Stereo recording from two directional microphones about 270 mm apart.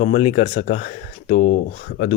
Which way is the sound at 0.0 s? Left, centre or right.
Left.